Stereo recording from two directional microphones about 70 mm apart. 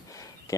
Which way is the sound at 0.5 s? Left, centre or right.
Left.